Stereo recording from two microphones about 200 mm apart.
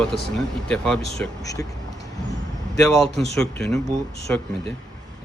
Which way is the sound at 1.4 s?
15° left (ahead or behind).